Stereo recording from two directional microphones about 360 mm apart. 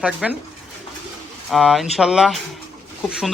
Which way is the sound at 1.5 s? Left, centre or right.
Centre.